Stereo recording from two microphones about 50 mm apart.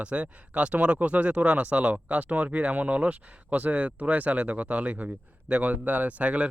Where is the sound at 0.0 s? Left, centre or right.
Right.